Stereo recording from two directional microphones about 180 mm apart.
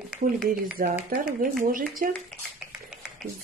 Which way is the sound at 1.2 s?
50° right (ahead or behind).